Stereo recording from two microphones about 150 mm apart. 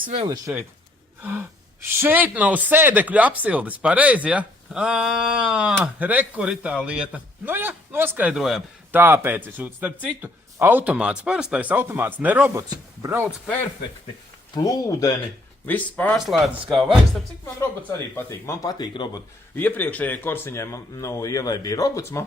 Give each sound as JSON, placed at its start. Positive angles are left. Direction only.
{"t": 1.2, "sound": "speech", "side_deg": -10}
{"t": 8.9, "sound": "speech", "side_deg": -15}
{"t": 14.5, "sound": "speech", "side_deg": 25}
{"t": 15.6, "sound": "speech", "side_deg": 10}
{"t": 18.1, "sound": "speech", "side_deg": 15}
{"t": 19.5, "sound": "speech", "side_deg": 10}